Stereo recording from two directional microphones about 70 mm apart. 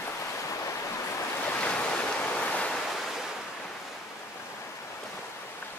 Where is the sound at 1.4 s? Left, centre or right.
Centre.